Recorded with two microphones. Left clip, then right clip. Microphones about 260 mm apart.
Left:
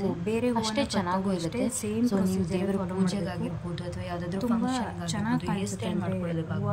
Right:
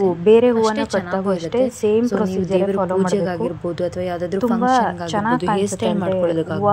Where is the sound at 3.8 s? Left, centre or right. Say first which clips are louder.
Right 14 dB; centre.